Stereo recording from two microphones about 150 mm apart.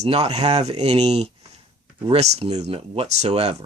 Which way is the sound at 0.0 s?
45° right (ahead or behind).